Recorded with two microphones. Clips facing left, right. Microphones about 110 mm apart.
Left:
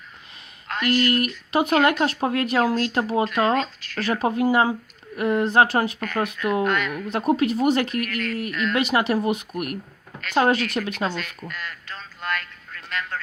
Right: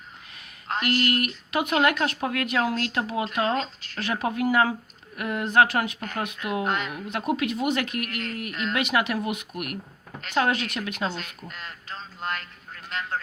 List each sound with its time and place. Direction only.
0.7 s speech: 30° right (ahead or behind)
1.5 s a woman's voice: 30° left (ahead or behind)
3.5 s speech: 25° right (ahead or behind)
4.0 s a woman's voice: 35° left (ahead or behind)
6.7 s speech: 25° right (ahead or behind)
7.1 s a woman's voice: 35° left (ahead or behind)
7.9 s speech: 25° right (ahead or behind)
8.7 s a woman's voice: 30° left (ahead or behind)
11.1 s speech: 25° right (ahead or behind)
11.4 s a sound: 25° right (ahead or behind)